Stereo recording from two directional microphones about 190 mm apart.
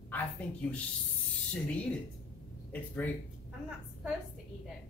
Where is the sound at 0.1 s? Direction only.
5° left (ahead or behind).